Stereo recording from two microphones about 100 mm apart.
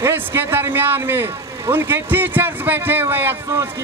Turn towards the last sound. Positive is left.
turn(degrees=-20)  # may be behind; listen again after turning